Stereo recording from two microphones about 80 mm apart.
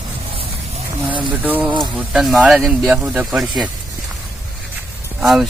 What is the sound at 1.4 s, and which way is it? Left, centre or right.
Speech, right.